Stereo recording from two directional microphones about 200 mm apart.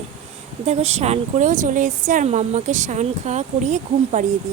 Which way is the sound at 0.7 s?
35° right (ahead or behind).